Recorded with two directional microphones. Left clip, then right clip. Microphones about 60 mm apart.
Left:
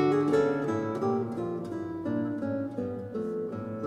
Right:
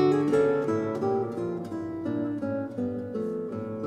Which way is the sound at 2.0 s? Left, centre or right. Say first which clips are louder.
Right 1 dB; right.